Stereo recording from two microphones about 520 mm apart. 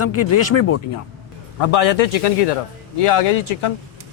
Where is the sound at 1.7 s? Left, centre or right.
Left.